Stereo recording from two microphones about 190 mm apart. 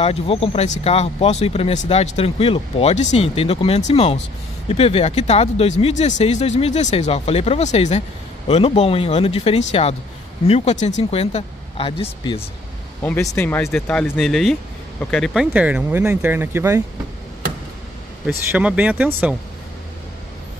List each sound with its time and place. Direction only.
0.0 s speech: 30° left (ahead or behind)
13.0 s speech: 15° left (ahead or behind); by 16.8 s 15° right (ahead or behind)
18.5 s speech: 5° right (ahead or behind)